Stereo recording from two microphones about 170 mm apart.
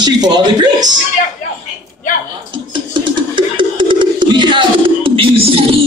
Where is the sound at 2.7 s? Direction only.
30° right (ahead or behind).